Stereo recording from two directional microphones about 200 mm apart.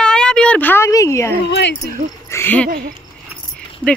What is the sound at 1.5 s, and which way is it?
Speech, 60° left (ahead or behind).